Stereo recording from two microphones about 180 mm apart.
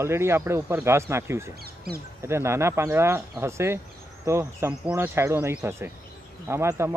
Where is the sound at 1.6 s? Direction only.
60° right (ahead or behind).